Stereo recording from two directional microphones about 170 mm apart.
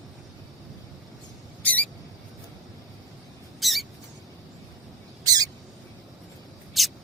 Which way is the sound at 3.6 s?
Centre (ahead or behind).